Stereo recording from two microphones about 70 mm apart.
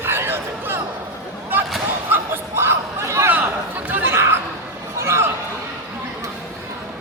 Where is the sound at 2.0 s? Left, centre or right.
Right.